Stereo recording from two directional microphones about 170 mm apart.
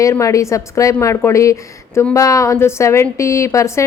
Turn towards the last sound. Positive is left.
turn(degrees=15)  # may be behind; listen again after turning